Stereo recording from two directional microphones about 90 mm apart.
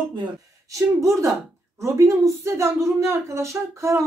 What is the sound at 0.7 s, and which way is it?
Speech, 35° right (ahead or behind).